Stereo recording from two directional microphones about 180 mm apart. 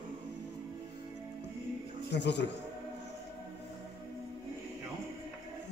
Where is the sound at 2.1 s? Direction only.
75° left (ahead or behind).